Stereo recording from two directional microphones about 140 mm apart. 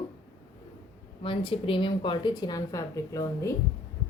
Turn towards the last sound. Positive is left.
turn(degrees=20)  # may be behind; listen again after turning